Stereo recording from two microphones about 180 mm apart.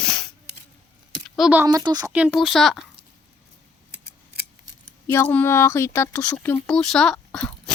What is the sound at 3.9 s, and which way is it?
Scissors, 65° right (ahead or behind).